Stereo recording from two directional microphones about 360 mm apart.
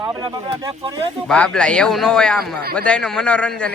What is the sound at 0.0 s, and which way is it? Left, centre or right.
Speech, centre.